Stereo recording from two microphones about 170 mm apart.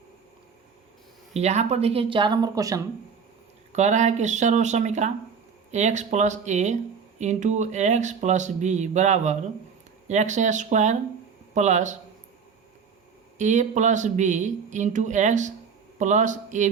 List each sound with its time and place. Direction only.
1.3 s speech: 40° right (ahead or behind); by 2.8 s 20° right (ahead or behind)
3.7 s speech: 45° right (ahead or behind)
13.4 s speech: 45° right (ahead or behind)